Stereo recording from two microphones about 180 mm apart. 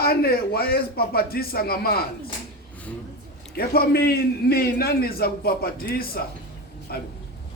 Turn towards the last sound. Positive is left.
turn(degrees=60)  # may be behind; listen again after turning